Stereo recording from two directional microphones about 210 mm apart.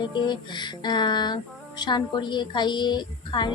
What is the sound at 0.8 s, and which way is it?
A woman's voice, 20° left (ahead or behind).